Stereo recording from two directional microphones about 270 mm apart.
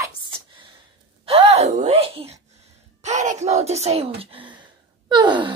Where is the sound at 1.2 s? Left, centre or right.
Right.